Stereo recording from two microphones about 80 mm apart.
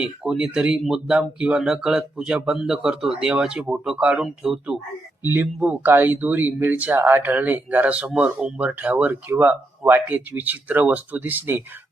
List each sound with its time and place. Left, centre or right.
0.0 s speech: centre
5.2 s speech: right